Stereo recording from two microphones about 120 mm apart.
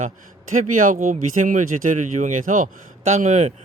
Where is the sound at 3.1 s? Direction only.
75° right (ahead or behind).